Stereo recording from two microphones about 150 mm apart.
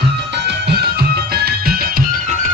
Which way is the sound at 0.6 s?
90° right.